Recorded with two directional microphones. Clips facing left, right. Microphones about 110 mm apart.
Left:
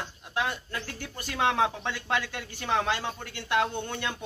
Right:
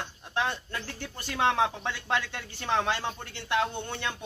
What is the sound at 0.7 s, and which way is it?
Speech, 15° left (ahead or behind).